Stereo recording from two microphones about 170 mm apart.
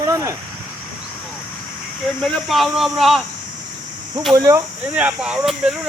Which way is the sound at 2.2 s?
Centre (ahead or behind).